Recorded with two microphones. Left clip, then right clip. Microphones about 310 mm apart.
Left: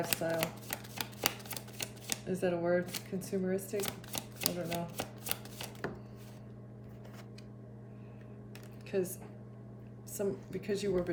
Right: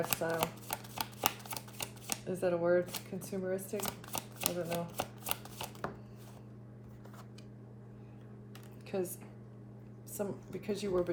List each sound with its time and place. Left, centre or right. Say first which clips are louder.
0.1 s shuffling cards: even; centre
4.7 s chopping: right 1 dB; centre
8.9 s speech: left 2 dB; centre
10.2 s speech: left 3 dB; centre